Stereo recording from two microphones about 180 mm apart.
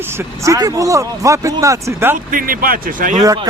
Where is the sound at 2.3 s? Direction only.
50° right (ahead or behind).